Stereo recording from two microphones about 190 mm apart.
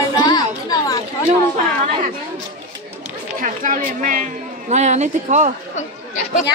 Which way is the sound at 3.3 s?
45° right (ahead or behind).